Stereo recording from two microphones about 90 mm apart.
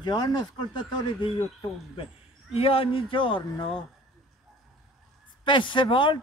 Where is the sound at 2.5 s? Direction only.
90° left.